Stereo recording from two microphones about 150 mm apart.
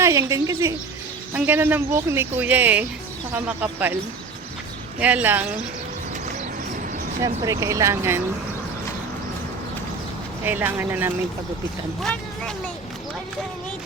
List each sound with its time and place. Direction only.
0.0 s speech: 20° right (ahead or behind)
4.9 s speech: 10° right (ahead or behind)
7.4 s speech: 20° right (ahead or behind)
10.4 s speech: 15° right (ahead or behind)
12.0 s speech: 5° left (ahead or behind)